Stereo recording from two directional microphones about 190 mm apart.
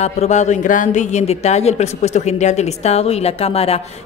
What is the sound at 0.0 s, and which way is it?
A man's voice, 35° left (ahead or behind).